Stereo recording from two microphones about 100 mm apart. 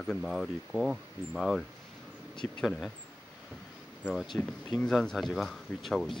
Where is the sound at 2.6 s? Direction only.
Centre (ahead or behind).